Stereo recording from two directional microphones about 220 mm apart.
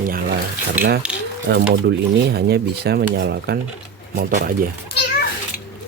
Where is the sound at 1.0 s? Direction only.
5° right (ahead or behind).